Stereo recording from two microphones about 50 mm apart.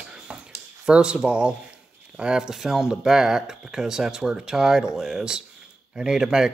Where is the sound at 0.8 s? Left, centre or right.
Centre.